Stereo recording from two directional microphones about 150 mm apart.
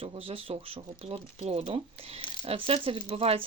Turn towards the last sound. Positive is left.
turn(degrees=-40)  # may be behind; listen again after turning